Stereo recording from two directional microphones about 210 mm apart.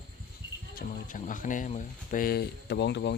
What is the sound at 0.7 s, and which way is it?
Speech, 40° left (ahead or behind).